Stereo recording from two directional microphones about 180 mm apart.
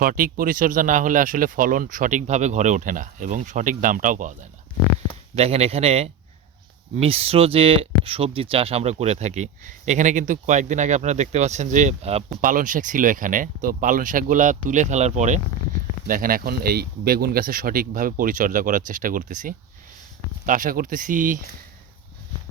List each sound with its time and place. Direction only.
0.0 s speech: 50° right (ahead or behind)
5.3 s speech: 35° right (ahead or behind)
16.0 s speech: 50° right (ahead or behind)